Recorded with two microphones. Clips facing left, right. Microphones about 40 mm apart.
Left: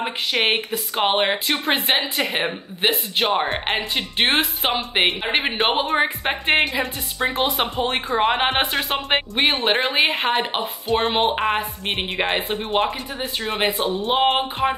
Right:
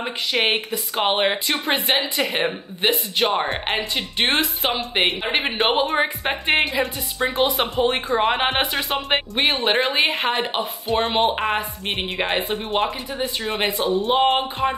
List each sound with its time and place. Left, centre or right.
0.0 s speech: centre
13.7 s speech: left
14.0 s speech: centre